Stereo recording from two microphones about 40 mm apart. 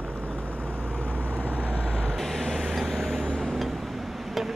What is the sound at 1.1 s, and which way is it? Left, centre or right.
Vehicle, right.